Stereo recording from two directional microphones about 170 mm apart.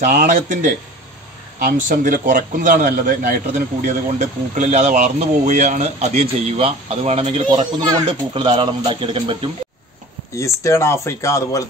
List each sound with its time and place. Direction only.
0.0 s a man's voice: 55° right (ahead or behind)
7.8 s speech: 25° right (ahead or behind)
10.3 s speech: 20° left (ahead or behind)